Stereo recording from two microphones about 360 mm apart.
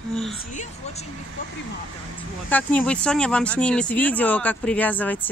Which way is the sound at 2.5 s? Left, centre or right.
Centre.